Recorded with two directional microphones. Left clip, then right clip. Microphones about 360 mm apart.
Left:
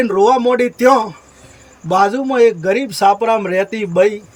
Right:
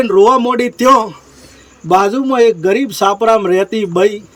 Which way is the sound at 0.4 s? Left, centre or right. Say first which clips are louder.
Left 1 dB; centre.